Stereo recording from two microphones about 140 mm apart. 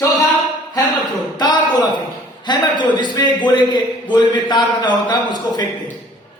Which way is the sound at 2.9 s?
35° left (ahead or behind).